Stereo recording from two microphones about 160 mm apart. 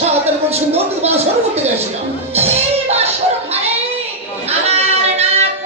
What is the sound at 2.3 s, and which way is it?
Music, 40° right (ahead or behind).